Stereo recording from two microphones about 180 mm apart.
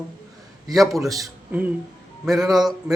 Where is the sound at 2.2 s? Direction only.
Centre (ahead or behind).